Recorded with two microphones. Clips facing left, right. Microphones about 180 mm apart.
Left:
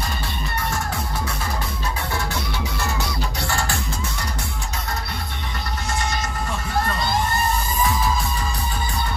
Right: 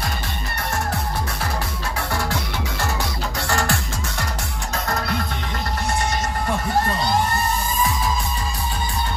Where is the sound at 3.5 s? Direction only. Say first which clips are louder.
Right 5 dB; 80° right.